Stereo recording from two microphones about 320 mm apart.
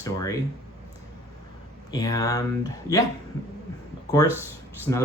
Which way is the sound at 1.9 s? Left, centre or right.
Centre.